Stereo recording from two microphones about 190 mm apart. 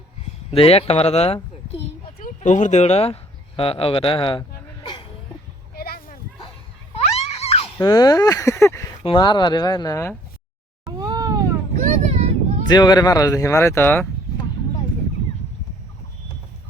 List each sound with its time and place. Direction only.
0.2 s a child's voice: 30° left (ahead or behind)
2.1 s speech: 45° left (ahead or behind); by 4.9 s 25° left (ahead or behind)
5.7 s a sound: 55° left (ahead or behind)
6.9 s screaming: 35° left (ahead or behind)
7.8 s speech: 20° left (ahead or behind)
10.8 s cat: 20° right (ahead or behind)
11.8 s vehicle: 35° right (ahead or behind)
12.6 s speech: 20° left (ahead or behind)